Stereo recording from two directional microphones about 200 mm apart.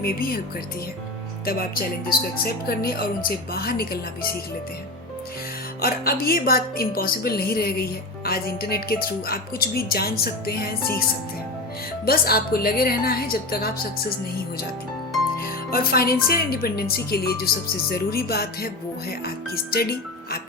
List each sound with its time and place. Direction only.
0.0 s a woman's voice: 50° left (ahead or behind)
1.5 s a woman's voice: 45° left (ahead or behind)
5.8 s a woman's voice: 50° left (ahead or behind)
12.0 s a woman's voice: 50° left (ahead or behind)
15.7 s a woman's voice: 50° left (ahead or behind)